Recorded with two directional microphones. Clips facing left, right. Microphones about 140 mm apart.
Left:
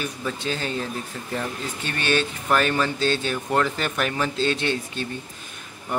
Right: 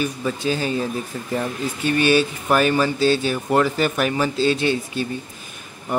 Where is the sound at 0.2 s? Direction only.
5° right (ahead or behind).